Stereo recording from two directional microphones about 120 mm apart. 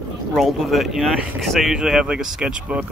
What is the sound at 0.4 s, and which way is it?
Speech, centre (ahead or behind).